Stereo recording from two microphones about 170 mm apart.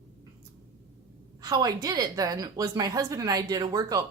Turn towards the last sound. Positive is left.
turn(degrees=-20)  # may be behind; listen again after turning